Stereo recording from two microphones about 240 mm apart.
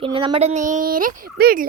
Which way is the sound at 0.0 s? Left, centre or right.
Right.